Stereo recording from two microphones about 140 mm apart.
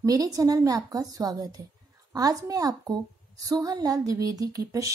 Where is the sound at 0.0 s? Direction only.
25° right (ahead or behind).